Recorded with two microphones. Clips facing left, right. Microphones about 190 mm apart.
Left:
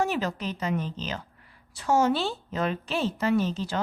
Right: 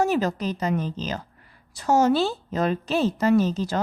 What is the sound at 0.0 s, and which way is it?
A woman's voice, 40° right (ahead or behind).